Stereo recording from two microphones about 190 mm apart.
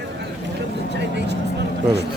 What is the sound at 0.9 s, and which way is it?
Vehicle, 65° right (ahead or behind).